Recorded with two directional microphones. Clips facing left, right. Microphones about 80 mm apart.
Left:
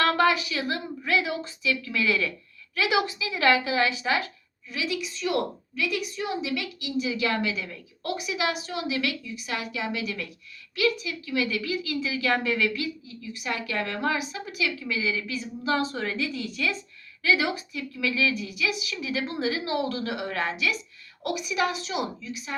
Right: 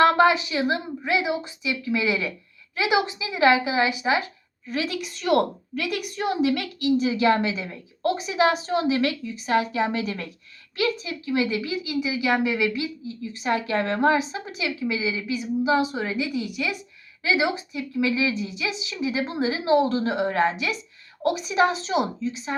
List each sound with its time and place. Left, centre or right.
0.0 s a woman's voice: right
4.7 s a woman's voice: right